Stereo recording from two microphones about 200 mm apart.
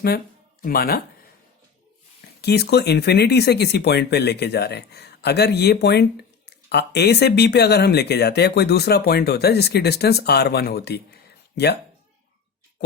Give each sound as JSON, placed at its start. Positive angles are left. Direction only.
{"t": 0.6, "sound": "speech", "side_deg": 50}
{"t": 2.4, "sound": "speech", "side_deg": 55}